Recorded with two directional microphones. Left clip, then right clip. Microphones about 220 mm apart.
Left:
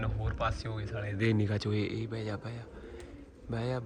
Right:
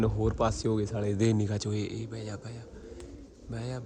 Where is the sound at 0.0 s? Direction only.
35° right (ahead or behind).